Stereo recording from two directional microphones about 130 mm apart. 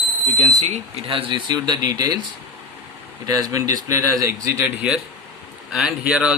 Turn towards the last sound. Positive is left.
turn(degrees=-5)  # may be behind; listen again after turning